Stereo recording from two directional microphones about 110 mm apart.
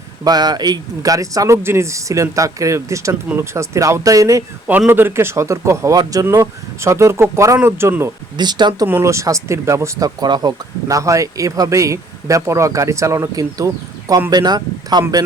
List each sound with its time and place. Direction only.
0.3 s speech: 40° right (ahead or behind)
4.9 s speech: 20° right (ahead or behind)
8.4 s speech: 40° right (ahead or behind)
8.9 s speech: 25° right (ahead or behind)